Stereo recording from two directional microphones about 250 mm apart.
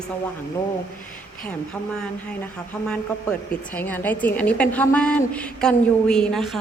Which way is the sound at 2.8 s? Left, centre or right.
Centre.